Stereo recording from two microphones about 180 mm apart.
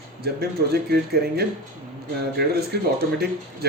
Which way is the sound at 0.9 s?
60° right (ahead or behind).